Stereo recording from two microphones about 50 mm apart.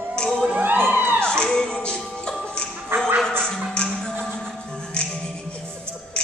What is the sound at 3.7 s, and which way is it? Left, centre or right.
Music, centre.